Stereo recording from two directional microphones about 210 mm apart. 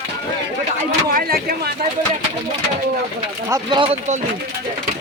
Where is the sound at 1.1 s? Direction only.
45° right (ahead or behind).